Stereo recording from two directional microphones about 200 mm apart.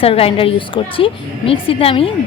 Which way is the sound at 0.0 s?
30° left (ahead or behind).